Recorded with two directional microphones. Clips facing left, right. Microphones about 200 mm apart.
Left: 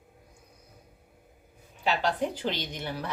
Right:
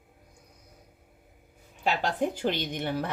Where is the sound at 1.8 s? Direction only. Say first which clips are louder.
Even; 50° right (ahead or behind).